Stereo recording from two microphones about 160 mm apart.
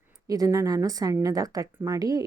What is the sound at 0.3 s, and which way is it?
A woman's voice, 20° right (ahead or behind).